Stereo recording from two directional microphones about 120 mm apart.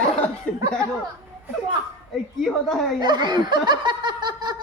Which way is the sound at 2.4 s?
Centre (ahead or behind).